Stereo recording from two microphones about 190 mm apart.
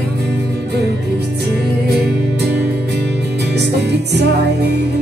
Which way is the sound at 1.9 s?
60° right (ahead or behind).